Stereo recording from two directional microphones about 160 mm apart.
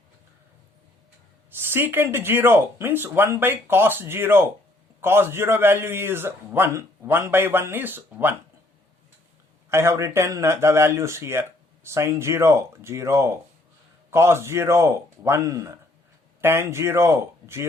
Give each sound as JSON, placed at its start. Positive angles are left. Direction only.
{"t": 1.5, "sound": "speech", "side_deg": -15}
{"t": 9.6, "sound": "speech", "side_deg": -15}